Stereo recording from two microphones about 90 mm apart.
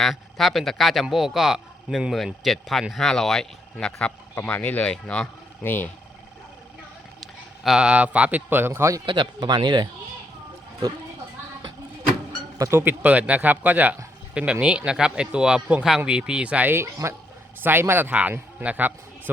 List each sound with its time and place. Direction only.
0.0 s speech: centre (ahead or behind)
5.6 s speech: 20° left (ahead or behind)
7.2 s speech: 5° right (ahead or behind); by 9.0 s 30° right (ahead or behind)
9.0 s speech: 50° right (ahead or behind)
12.5 s a man's voice: 30° right (ahead or behind); by 16.7 s 15° right (ahead or behind)
16.7 s a man's voice: 30° right (ahead or behind)